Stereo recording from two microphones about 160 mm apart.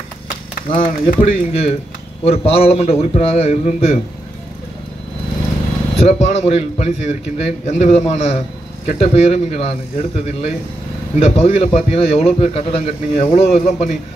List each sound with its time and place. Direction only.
0.7 s a man's voice: 30° left (ahead or behind)
5.9 s a man's voice: 40° left (ahead or behind)